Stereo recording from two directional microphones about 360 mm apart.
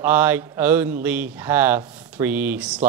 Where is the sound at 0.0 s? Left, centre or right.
Centre.